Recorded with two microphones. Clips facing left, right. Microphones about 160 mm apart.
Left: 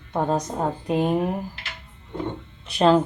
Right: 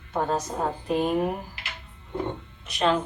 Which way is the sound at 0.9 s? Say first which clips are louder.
Left 2 dB; 20° left (ahead or behind).